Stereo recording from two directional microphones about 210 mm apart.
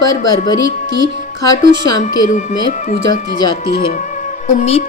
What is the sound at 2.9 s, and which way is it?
Speech, 40° left (ahead or behind).